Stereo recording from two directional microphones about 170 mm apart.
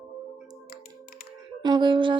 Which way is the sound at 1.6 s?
25° right (ahead or behind).